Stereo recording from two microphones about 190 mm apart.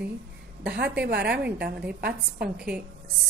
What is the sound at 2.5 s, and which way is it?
Speech, 5° right (ahead or behind).